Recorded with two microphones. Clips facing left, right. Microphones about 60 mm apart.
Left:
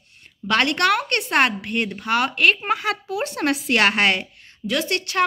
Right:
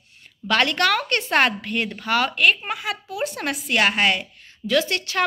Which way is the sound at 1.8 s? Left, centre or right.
Centre.